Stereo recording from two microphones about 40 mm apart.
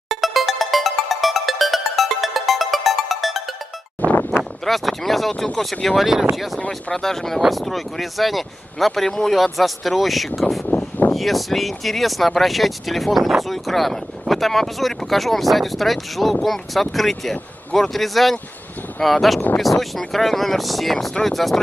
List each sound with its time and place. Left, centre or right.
0.1 s music: centre
4.1 s a sound: left
4.4 s speech: centre
6.7 s speech: centre